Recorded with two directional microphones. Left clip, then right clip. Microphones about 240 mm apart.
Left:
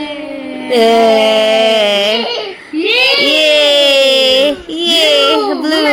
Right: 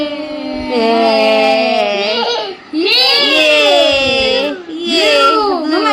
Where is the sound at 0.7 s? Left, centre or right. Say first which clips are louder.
Left 3 dB; centre.